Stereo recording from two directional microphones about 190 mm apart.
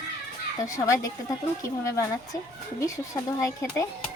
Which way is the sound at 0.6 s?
15° left (ahead or behind).